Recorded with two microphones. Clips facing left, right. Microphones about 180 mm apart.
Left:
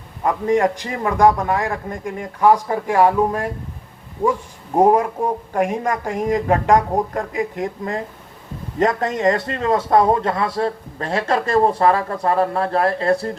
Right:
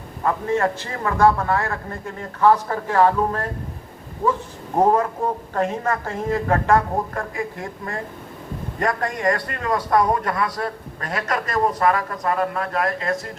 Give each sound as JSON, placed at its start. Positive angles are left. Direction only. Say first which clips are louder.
{"t": 0.3, "sound": "a man's voice", "louder": "left 4 dB", "side_deg": 15}
{"t": 4.8, "sound": "a man's voice", "louder": "left 3 dB", "side_deg": 15}